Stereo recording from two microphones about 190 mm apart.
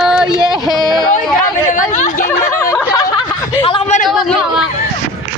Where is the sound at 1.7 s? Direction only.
40° left (ahead or behind).